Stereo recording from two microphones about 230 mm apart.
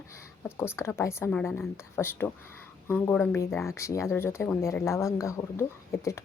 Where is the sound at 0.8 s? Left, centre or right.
Centre.